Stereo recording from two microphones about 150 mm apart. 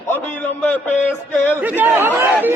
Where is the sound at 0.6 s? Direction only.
10° left (ahead or behind).